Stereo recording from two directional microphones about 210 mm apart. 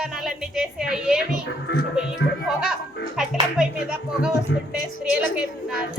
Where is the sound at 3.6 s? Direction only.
5° right (ahead or behind).